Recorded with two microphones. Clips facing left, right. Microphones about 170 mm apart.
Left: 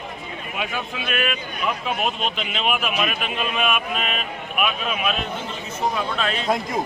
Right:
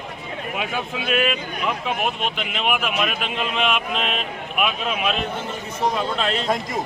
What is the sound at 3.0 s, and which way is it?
A man's voice, 10° left (ahead or behind).